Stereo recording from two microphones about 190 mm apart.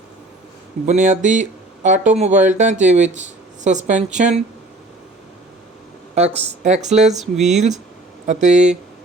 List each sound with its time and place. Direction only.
0.9 s speech: 40° right (ahead or behind)
6.1 s speech: 35° right (ahead or behind)
7.2 s speech: centre (ahead or behind)
8.3 s speech: 40° right (ahead or behind)